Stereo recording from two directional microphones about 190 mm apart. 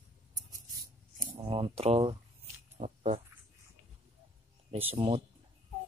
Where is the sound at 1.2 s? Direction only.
25° right (ahead or behind).